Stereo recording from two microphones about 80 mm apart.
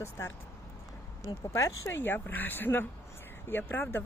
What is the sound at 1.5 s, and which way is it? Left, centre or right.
Speech, left.